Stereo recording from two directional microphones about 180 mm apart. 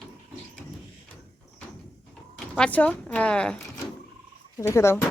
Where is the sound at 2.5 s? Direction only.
5° left (ahead or behind).